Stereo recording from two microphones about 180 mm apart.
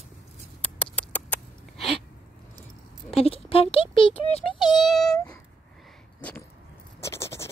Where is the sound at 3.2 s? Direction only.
30° left (ahead or behind).